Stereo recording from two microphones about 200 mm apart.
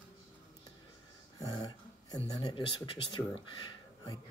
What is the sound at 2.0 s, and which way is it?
Speech, 20° left (ahead or behind).